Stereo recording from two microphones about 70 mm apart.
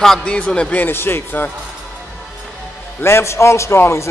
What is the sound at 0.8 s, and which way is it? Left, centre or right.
Speech, left.